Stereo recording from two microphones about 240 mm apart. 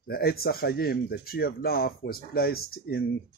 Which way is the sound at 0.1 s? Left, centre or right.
Left.